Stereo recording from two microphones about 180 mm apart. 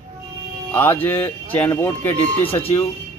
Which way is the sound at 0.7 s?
10° left (ahead or behind).